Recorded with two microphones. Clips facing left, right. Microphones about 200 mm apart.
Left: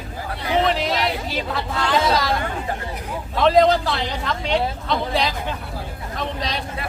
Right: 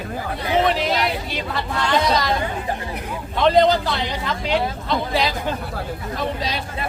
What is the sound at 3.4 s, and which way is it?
A man's voice, centre (ahead or behind).